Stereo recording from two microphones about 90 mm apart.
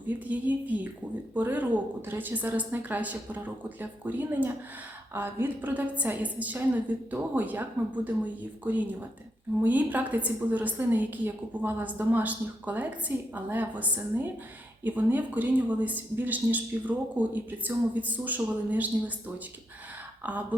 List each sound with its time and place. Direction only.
0.1 s a woman's voice: 15° right (ahead or behind)
20.2 s a woman's voice: 20° right (ahead or behind)